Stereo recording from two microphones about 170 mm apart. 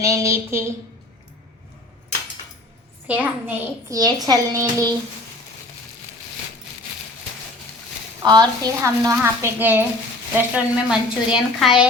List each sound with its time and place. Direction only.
0.0 s a child's voice: 20° right (ahead or behind)
3.1 s a child's voice: 10° right (ahead or behind)
8.2 s a child's voice: 25° right (ahead or behind); by 11.9 s 5° right (ahead or behind)